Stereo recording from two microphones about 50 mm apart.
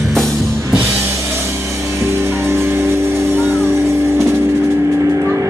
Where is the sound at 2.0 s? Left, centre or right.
Right.